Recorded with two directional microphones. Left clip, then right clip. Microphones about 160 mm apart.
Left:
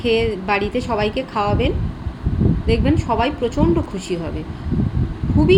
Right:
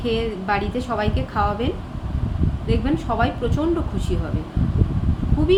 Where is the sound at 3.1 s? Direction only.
10° left (ahead or behind).